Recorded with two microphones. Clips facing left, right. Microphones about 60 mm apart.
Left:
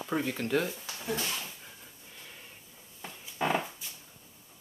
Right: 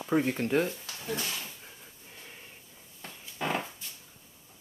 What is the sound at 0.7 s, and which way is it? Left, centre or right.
Speech, centre.